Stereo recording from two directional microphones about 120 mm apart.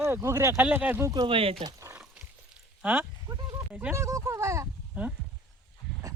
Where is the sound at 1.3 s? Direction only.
50° right (ahead or behind).